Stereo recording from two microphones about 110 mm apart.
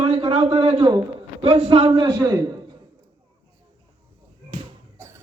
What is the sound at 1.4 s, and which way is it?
Speech, 70° right (ahead or behind).